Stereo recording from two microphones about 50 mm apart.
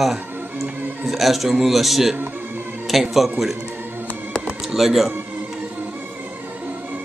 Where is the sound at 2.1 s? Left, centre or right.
Right.